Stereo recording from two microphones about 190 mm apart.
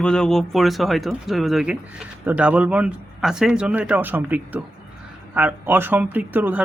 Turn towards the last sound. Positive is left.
turn(degrees=-10)  # may be behind; listen again after turning